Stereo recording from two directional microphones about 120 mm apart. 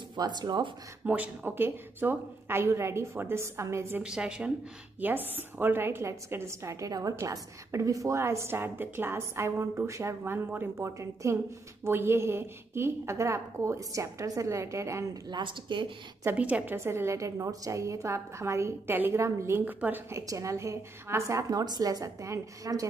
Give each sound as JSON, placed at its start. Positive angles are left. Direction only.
{"t": 0.1, "sound": "speech", "side_deg": -35}
{"t": 1.0, "sound": "a woman's voice", "side_deg": -15}
{"t": 4.0, "sound": "a woman's voice", "side_deg": -5}
{"t": 15.2, "sound": "speech", "side_deg": -40}
{"t": 16.3, "sound": "a woman's voice", "side_deg": -10}